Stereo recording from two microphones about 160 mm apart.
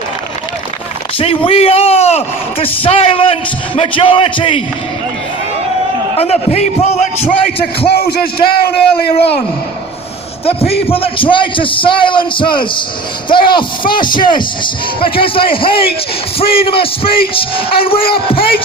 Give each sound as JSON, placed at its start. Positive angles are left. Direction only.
{"t": 1.5, "sound": "a man's voice", "side_deg": 40}
{"t": 6.1, "sound": "a man's voice", "side_deg": 40}
{"t": 7.9, "sound": "a man's voice", "side_deg": 75}
{"t": 10.4, "sound": "a man's voice", "side_deg": 40}